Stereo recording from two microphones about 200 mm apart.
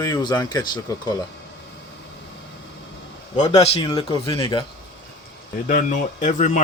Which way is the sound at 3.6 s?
30° left (ahead or behind).